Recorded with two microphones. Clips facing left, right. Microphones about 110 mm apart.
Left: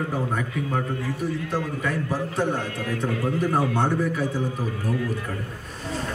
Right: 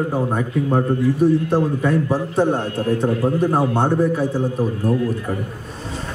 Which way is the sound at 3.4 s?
20° right (ahead or behind).